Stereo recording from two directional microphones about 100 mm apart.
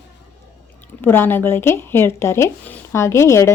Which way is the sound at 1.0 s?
20° left (ahead or behind).